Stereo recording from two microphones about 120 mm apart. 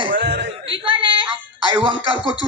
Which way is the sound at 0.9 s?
45° right (ahead or behind).